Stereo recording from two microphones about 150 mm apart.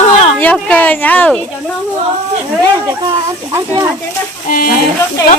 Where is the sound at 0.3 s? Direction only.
10° left (ahead or behind).